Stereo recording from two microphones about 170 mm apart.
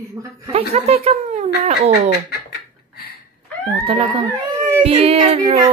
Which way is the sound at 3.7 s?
35° right (ahead or behind).